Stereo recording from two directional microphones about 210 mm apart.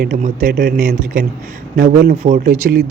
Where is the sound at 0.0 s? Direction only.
45° right (ahead or behind).